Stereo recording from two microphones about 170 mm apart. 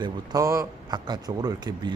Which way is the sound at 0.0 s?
20° right (ahead or behind).